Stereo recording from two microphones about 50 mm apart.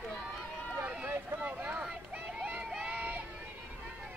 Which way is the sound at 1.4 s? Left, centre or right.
Right.